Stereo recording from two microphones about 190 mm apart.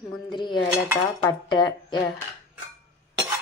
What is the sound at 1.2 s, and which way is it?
Speech, 25° left (ahead or behind).